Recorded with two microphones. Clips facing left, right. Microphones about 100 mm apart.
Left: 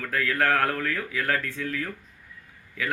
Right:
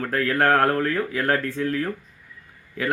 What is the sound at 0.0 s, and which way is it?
A man's voice, 40° right (ahead or behind).